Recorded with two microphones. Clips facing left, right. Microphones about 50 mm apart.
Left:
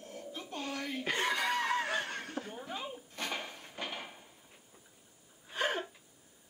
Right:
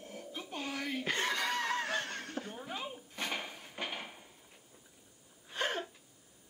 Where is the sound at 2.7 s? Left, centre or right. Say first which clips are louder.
Even; centre.